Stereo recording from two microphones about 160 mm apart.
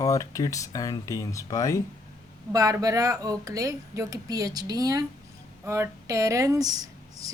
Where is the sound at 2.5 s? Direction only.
25° right (ahead or behind).